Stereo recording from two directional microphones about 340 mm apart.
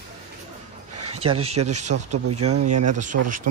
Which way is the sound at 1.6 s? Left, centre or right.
Right.